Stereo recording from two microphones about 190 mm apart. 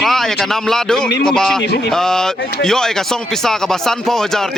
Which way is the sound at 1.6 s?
65° left (ahead or behind).